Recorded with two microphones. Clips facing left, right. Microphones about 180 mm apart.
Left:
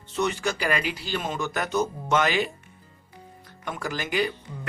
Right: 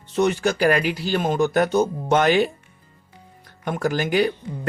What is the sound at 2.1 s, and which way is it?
Speech, 55° right (ahead or behind).